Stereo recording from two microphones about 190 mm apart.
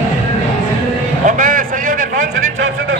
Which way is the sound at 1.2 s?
45° right (ahead or behind).